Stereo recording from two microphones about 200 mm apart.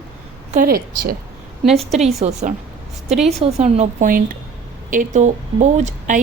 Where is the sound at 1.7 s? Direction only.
30° right (ahead or behind).